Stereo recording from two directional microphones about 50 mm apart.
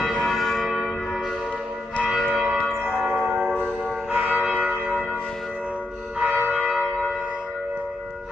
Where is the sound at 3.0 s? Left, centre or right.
Right.